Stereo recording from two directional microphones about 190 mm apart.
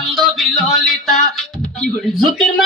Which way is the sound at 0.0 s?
Centre (ahead or behind).